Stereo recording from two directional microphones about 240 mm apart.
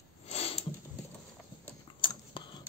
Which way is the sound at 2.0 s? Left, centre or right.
Centre.